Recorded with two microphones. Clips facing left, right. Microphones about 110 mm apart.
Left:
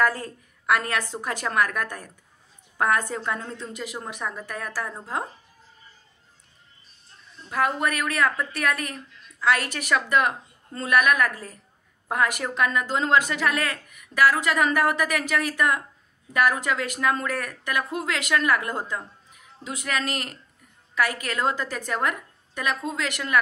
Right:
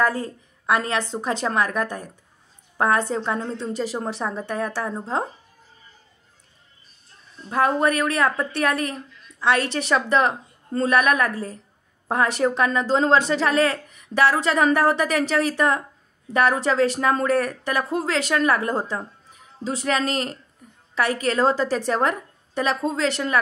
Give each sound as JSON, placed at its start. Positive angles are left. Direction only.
{"t": 0.0, "sound": "a woman's voice", "side_deg": -20}
{"t": 7.4, "sound": "a woman's voice", "side_deg": -30}